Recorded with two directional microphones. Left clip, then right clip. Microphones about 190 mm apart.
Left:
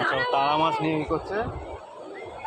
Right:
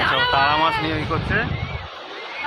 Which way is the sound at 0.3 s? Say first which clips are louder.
Right 4 dB; 35° right (ahead or behind).